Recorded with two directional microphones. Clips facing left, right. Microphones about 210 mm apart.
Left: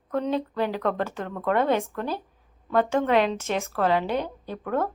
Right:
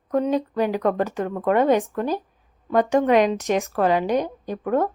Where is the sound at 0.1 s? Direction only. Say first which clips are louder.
Right 5 dB; 15° right (ahead or behind).